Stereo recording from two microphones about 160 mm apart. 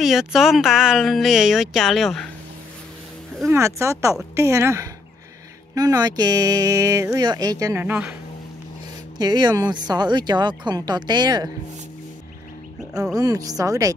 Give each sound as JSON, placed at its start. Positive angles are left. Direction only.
{"t": 0.0, "sound": "speech", "side_deg": 0}
{"t": 3.4, "sound": "speech", "side_deg": -20}
{"t": 9.2, "sound": "speech", "side_deg": -25}
{"t": 13.1, "sound": "speech", "side_deg": -20}